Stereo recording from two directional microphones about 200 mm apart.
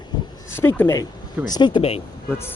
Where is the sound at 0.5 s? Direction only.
10° left (ahead or behind).